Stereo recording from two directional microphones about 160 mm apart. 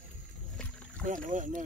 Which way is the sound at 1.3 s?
55° right (ahead or behind).